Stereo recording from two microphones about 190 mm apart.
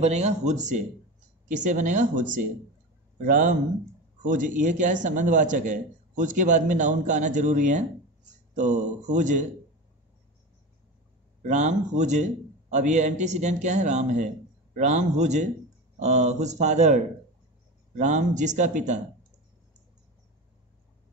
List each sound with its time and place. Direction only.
0.0 s a man's voice: 35° right (ahead or behind)
11.4 s a man's voice: 40° right (ahead or behind)